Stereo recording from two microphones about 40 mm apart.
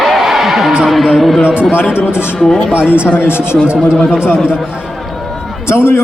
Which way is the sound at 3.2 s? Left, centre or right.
Left.